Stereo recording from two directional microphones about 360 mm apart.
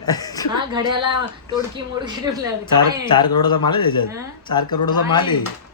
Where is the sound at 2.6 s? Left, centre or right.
Centre.